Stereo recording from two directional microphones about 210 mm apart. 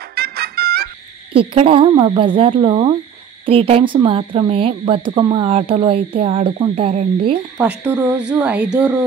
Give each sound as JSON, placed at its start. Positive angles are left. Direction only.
{"t": 0.1, "sound": "music", "side_deg": -45}
{"t": 1.3, "sound": "a woman's voice", "side_deg": -25}
{"t": 7.5, "sound": "speech", "side_deg": -5}